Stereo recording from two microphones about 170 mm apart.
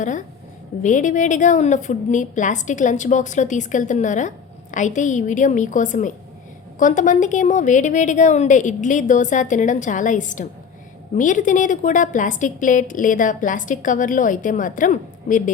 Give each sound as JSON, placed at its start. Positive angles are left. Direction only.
{"t": 0.8, "sound": "a woman's voice", "side_deg": 50}